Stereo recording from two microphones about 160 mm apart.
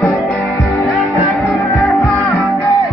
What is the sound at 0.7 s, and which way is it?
Music, 20° left (ahead or behind).